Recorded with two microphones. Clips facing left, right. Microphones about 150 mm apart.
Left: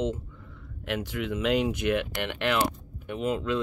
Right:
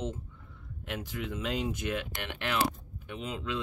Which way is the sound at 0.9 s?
70° left (ahead or behind).